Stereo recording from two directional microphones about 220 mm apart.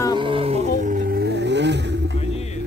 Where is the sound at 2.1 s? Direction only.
30° left (ahead or behind).